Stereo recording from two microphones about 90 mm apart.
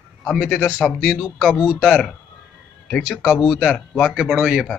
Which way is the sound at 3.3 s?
5° right (ahead or behind).